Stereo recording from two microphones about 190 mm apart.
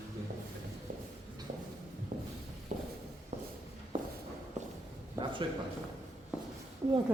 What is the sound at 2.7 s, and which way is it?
Walk, 40° right (ahead or behind).